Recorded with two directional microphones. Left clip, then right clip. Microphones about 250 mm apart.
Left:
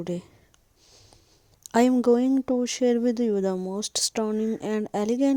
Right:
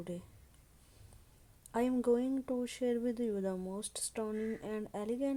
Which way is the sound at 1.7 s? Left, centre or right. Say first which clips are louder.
Left 12 dB; left.